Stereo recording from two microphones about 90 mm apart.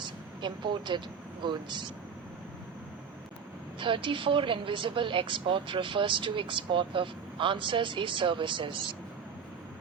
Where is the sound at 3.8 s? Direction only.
70° right (ahead or behind).